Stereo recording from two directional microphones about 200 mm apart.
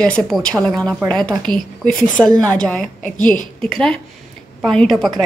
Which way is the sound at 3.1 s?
40° left (ahead or behind).